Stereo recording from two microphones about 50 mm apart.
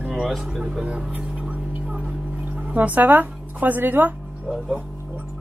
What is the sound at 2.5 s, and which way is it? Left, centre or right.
Speech, right.